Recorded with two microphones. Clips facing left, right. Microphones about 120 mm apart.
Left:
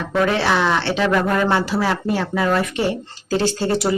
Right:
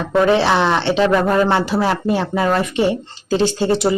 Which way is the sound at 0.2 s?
25° right (ahead or behind).